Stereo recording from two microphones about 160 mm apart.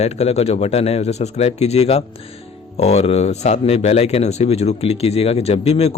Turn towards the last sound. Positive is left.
turn(degrees=40)  # may be behind; listen again after turning